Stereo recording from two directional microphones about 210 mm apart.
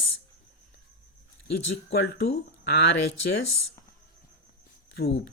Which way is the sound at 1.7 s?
60° left (ahead or behind).